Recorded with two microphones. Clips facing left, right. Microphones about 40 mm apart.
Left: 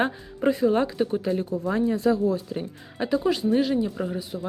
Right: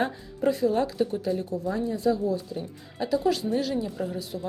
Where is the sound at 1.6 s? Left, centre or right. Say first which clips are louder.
Left 4 dB; left.